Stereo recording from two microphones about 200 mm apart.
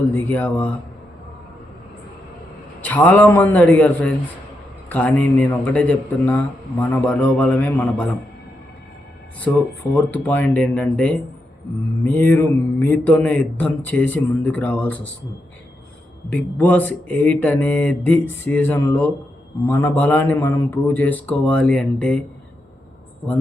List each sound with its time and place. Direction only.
0.1 s a man's voice: 10° left (ahead or behind)
2.8 s a man's voice: 10° left (ahead or behind)
9.4 s a man's voice: 10° left (ahead or behind)
16.3 s a man's voice: 10° left (ahead or behind)